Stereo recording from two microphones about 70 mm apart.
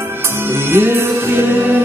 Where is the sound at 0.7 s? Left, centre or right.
Right.